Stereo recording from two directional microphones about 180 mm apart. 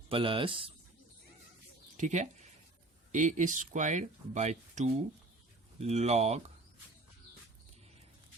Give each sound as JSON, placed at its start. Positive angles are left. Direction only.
{"t": 0.1, "sound": "speech", "side_deg": -30}
{"t": 2.0, "sound": "speech", "side_deg": -40}